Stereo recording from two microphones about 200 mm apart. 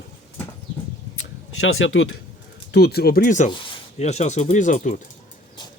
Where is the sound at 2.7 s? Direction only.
55° left (ahead or behind).